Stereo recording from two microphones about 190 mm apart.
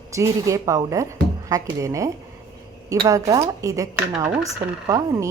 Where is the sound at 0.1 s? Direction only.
15° right (ahead or behind).